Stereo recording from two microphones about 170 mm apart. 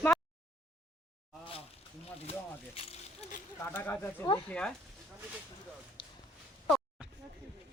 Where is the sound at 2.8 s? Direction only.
35° left (ahead or behind).